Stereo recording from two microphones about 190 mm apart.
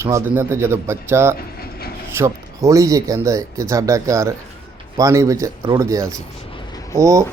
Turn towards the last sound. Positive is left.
turn(degrees=-15)  # may be behind; listen again after turning